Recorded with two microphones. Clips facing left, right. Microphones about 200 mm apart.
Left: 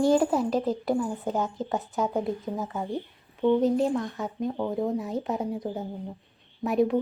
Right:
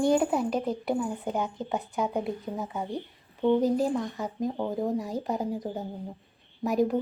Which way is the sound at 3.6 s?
Centre (ahead or behind).